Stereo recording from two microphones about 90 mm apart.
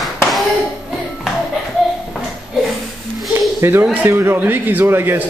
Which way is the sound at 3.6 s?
25° right (ahead or behind).